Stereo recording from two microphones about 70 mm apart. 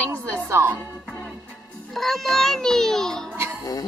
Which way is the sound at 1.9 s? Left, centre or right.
Centre.